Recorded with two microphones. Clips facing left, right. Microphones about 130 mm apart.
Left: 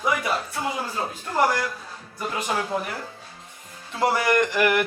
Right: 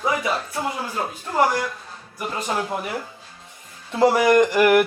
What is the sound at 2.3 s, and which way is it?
Speech, 10° left (ahead or behind).